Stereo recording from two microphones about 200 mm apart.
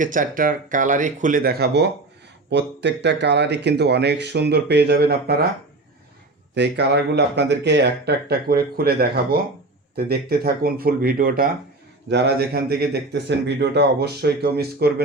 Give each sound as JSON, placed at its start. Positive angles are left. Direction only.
{"t": 0.0, "sound": "speech", "side_deg": -40}
{"t": 6.5, "sound": "speech", "side_deg": -55}